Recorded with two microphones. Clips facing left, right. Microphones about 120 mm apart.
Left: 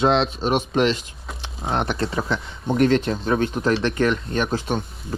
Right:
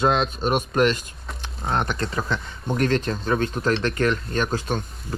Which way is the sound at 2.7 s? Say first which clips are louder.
Left 4 dB; 45° right (ahead or behind).